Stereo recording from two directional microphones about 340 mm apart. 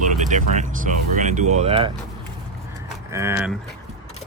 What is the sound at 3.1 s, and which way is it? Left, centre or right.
Speech, centre.